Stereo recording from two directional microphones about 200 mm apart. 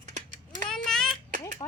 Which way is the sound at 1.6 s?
20° left (ahead or behind).